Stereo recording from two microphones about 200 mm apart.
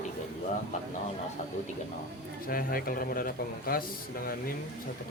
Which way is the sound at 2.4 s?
45° left (ahead or behind).